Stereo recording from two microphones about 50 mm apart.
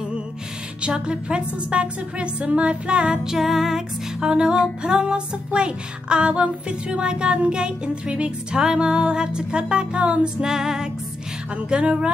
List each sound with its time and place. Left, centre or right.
0.8 s music: right
3.3 s music: centre; by 10.3 s right
10.4 s music: centre
11.5 s music: right